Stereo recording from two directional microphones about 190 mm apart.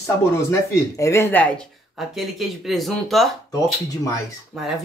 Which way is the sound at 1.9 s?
Centre (ahead or behind).